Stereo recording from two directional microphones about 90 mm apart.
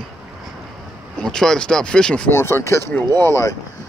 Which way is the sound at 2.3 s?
30° left (ahead or behind).